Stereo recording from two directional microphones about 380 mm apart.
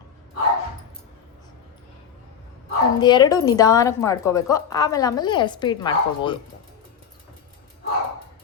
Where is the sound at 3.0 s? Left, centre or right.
Centre.